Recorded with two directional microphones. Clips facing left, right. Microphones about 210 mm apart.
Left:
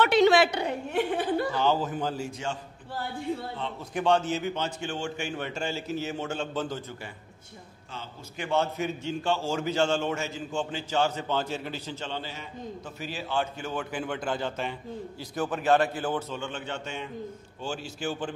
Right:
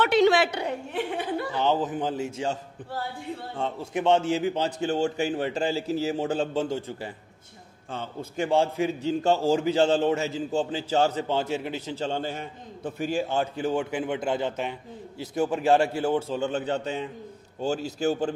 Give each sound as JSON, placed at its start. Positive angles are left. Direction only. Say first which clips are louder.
{"t": 0.9, "sound": "speech", "louder": "left 4 dB", "side_deg": 40}
{"t": 1.5, "sound": "a man's voice", "louder": "right 1 dB", "side_deg": -20}
{"t": 3.9, "sound": "a man's voice", "louder": "right 2 dB", "side_deg": -25}
{"t": 7.9, "sound": "a man's voice", "louder": "right 8 dB", "side_deg": -55}
{"t": 8.5, "sound": "a man's voice", "louder": "right 3 dB", "side_deg": -30}
{"t": 12.0, "sound": "a man's voice", "louder": "right 7 dB", "side_deg": -45}